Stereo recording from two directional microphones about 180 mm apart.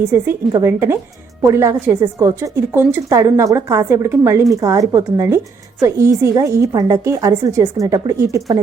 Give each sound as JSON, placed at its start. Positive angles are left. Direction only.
{"t": 0.1, "sound": "a woman's voice", "side_deg": -15}